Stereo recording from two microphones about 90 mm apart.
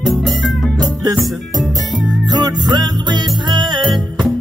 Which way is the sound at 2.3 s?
50° right (ahead or behind).